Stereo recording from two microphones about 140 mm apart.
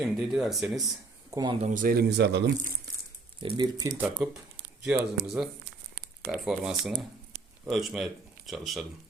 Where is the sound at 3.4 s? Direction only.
35° right (ahead or behind).